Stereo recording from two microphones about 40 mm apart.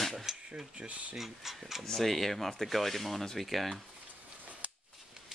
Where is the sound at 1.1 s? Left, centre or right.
Centre.